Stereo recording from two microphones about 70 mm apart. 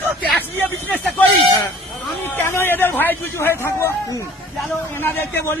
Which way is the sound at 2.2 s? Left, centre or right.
Left.